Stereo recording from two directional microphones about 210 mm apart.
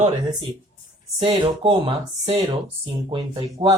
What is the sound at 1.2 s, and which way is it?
Speech, 25° right (ahead or behind).